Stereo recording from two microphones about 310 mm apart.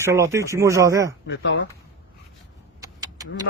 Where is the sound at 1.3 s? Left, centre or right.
Left.